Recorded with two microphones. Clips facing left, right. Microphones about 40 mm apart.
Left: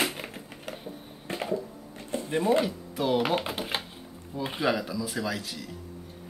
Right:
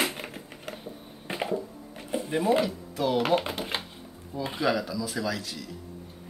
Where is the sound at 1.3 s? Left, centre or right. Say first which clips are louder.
Right 1 dB; centre.